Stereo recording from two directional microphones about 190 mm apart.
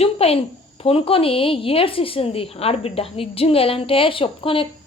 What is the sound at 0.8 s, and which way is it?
A woman's voice, 30° left (ahead or behind).